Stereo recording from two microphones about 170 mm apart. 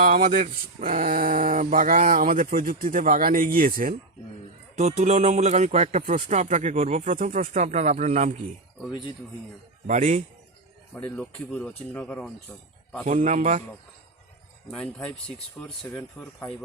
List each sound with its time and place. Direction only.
0.0 s speech: 55° right (ahead or behind)
4.8 s speech: 40° right (ahead or behind)
8.9 s speech: 25° left (ahead or behind)
9.8 s speech: 45° right (ahead or behind)
10.9 s speech: 5° left (ahead or behind)
13.1 s speech: 45° right (ahead or behind)
14.7 s speech: 5° left (ahead or behind)